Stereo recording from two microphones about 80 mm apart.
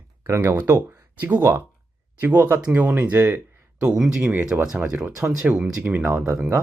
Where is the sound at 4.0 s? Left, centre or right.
Centre.